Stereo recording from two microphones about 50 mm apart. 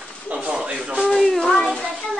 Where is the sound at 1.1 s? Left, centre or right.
Centre.